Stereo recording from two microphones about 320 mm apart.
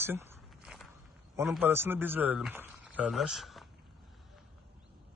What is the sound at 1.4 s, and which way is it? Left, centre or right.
Speech, centre.